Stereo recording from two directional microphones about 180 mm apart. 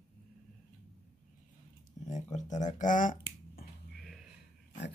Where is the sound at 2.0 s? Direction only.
40° left (ahead or behind).